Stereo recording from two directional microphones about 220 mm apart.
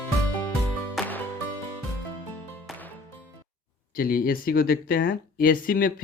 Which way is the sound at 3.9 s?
40° left (ahead or behind).